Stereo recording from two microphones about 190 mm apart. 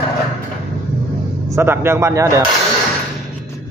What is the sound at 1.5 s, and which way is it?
Speech, 10° right (ahead or behind).